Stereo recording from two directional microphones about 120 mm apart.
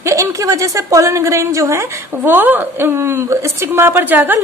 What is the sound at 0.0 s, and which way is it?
A woman's voice, 25° right (ahead or behind).